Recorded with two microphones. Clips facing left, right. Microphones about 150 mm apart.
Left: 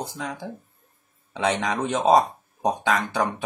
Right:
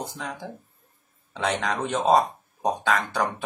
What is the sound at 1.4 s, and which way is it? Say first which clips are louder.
Speech: left 2 dB; 10° left (ahead or behind).